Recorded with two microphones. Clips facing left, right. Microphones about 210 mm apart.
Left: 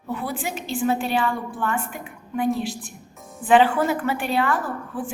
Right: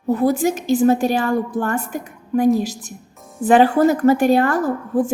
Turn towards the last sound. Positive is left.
turn(degrees=-40)  # may be behind; listen again after turning